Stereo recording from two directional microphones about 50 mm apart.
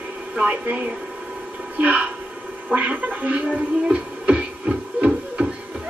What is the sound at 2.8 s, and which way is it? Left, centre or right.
Music, right.